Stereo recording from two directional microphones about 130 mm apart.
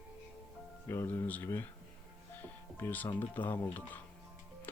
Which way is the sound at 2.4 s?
15° left (ahead or behind).